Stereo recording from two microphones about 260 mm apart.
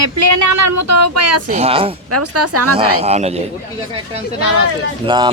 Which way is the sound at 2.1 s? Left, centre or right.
Right.